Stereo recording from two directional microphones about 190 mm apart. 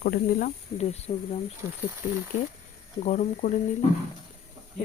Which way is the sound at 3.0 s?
35° left (ahead or behind).